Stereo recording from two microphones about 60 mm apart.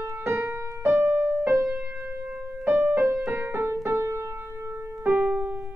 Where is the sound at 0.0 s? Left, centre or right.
Right.